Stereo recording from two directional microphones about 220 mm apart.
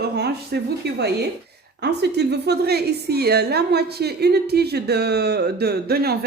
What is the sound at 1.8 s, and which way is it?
A woman's voice, 50° right (ahead or behind).